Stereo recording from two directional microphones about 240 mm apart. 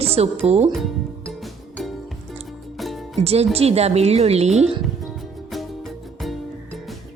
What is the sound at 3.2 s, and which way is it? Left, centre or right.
Speech, right.